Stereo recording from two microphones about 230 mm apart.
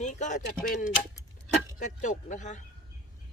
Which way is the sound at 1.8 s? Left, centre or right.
Left.